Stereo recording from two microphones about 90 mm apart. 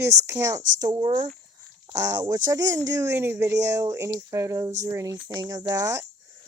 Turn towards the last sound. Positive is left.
turn(degrees=-45)  # may be behind; listen again after turning